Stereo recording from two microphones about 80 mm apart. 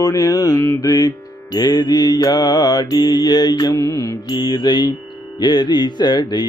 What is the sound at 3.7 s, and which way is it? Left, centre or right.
Mantra, left.